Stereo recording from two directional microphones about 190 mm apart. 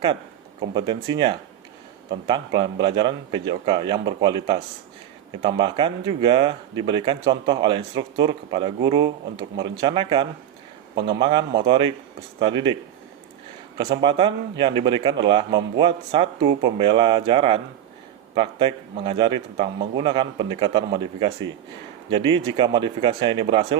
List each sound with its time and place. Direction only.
0.8 s speech: 20° right (ahead or behind)
13.7 s speech: 25° right (ahead or behind)